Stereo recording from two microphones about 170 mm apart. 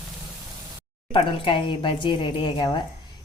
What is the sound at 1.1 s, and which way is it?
A woman's voice, 30° left (ahead or behind).